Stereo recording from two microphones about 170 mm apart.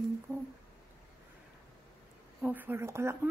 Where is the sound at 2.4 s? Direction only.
10° right (ahead or behind).